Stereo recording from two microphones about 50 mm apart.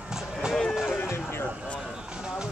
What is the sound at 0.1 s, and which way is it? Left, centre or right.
Run, centre.